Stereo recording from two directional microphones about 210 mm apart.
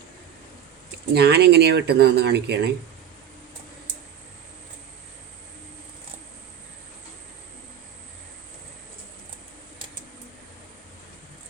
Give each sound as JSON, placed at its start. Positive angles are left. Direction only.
{"t": 1.1, "sound": "speech", "side_deg": -50}